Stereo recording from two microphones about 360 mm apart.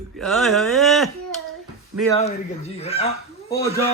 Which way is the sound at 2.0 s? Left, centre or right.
Centre.